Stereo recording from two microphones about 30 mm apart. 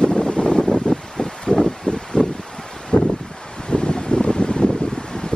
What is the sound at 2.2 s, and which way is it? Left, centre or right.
Wind, left.